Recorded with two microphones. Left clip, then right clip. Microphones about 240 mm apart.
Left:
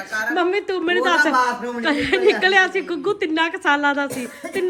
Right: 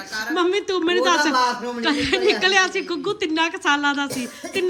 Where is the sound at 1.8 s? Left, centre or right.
Centre.